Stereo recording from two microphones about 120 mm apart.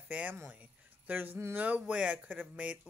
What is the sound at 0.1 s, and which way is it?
Speech, 15° right (ahead or behind).